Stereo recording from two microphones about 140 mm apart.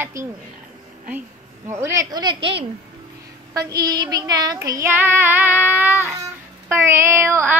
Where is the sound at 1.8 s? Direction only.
25° right (ahead or behind).